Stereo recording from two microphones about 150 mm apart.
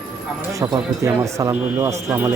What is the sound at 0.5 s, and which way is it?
A man's voice, 25° right (ahead or behind).